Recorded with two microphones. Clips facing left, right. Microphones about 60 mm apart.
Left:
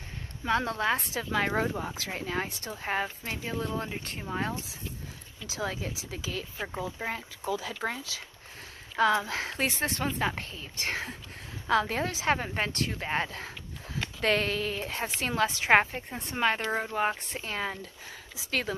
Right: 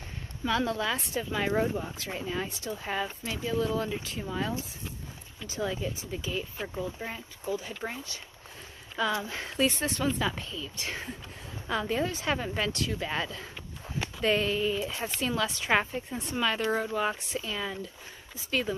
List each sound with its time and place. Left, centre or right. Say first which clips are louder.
0.5 s speech: left 1 dB; left
1.1 s speech: left 1 dB; left
1.6 s speech: right 1 dB; left
2.0 s speech: left 1 dB; left
3.5 s speech: right 6 dB; left
5.5 s speech: right 2 dB; left
8.9 s speech: left 5 dB; left
12.4 s speech: even; left
14.2 s speech: right 1 dB; left
15.8 s speech: left 1 dB; left
17.2 s speech: even; left
18.3 s speech: right 1 dB; left